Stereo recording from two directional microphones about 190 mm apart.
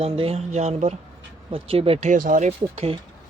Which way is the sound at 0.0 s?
30° right (ahead or behind).